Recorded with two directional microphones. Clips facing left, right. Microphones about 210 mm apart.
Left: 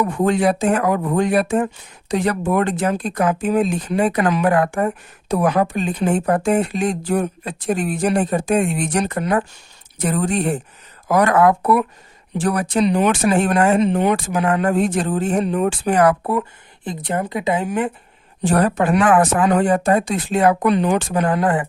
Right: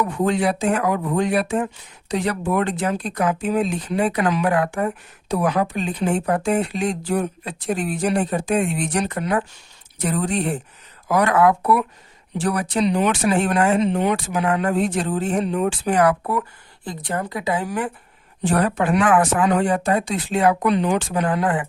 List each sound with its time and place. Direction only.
0.0 s speech: 50° left (ahead or behind)
16.8 s a woman's voice: 20° left (ahead or behind)
18.4 s speech: 40° left (ahead or behind)